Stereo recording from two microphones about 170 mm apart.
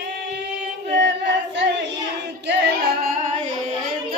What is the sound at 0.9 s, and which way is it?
Female singing, 90° right.